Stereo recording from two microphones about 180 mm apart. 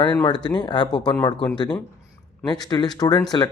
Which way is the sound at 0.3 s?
25° left (ahead or behind).